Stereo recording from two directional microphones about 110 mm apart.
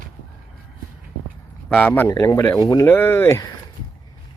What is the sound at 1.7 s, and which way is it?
Speech, 15° left (ahead or behind).